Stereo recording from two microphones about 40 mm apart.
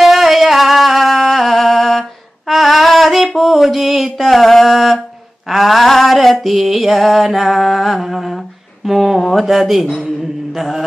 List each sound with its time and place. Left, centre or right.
0.0 s music: centre
3.3 s mantra: centre
5.5 s a sound: centre
7.5 s humming: centre
9.2 s speech: centre
10.5 s chant: centre